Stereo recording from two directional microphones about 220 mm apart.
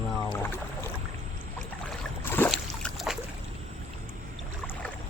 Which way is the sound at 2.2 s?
10° left (ahead or behind).